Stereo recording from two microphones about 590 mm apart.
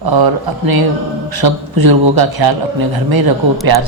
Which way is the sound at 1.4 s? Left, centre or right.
Right.